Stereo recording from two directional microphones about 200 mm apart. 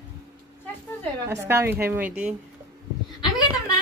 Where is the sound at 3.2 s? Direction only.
20° left (ahead or behind).